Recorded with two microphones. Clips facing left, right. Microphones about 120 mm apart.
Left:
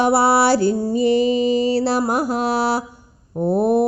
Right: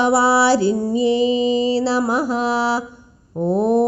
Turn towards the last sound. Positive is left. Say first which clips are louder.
# even
turn(degrees=10)  # may be behind; listen again after turning